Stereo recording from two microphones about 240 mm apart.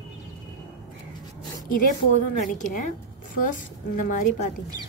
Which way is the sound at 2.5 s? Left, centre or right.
Left.